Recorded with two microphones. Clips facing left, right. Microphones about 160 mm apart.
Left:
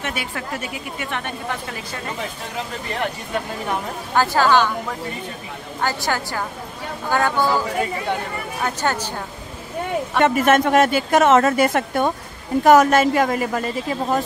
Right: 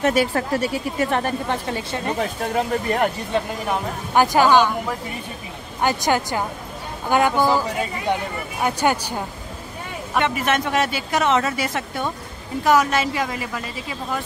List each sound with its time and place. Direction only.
0.0 s speech: 40° right (ahead or behind)
2.5 s speech: 45° right (ahead or behind)
4.1 s a woman's voice: 15° right (ahead or behind)
5.8 s a woman's voice: 20° right (ahead or behind)
8.6 s a woman's voice: 15° right (ahead or behind)
10.2 s a woman's voice: 45° left (ahead or behind)